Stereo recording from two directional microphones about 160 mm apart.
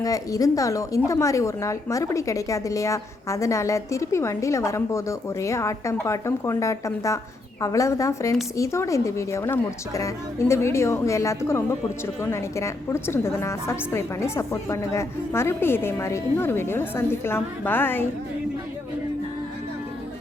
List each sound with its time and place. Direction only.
0.0 s a woman's voice: 20° left (ahead or behind)